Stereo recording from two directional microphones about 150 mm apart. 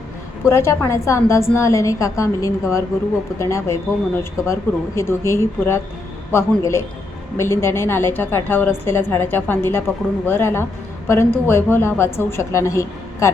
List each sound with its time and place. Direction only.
0.4 s a woman's voice: 20° left (ahead or behind)